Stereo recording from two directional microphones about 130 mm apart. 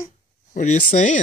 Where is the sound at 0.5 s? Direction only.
75° left (ahead or behind).